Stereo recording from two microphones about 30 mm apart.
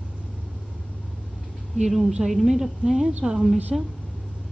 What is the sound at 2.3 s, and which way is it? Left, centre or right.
A woman's voice, centre.